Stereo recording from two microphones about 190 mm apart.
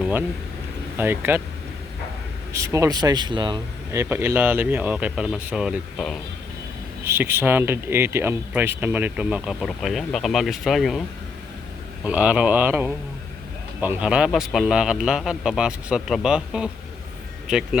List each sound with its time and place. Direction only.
0.0 s speech: 10° right (ahead or behind)
2.5 s speech: 15° right (ahead or behind)
4.0 s speech: 10° right (ahead or behind)
7.0 s speech: 10° right (ahead or behind)
12.0 s a man's voice: 5° right (ahead or behind)